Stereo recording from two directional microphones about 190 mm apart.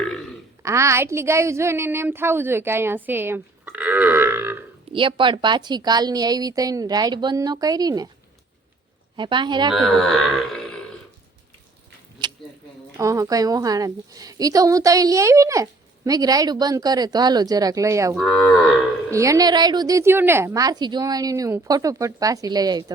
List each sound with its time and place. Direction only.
0.0 s burping: 5° left (ahead or behind)
0.6 s a woman's voice: 15° right (ahead or behind)
4.9 s a woman's voice: 25° right (ahead or behind)
9.1 s a woman's voice: 25° right (ahead or behind)
9.7 s speech: centre (ahead or behind)
13.0 s a woman's voice: 15° right (ahead or behind)
18.1 s cattle: centre (ahead or behind)
19.1 s a woman's voice: 15° right (ahead or behind)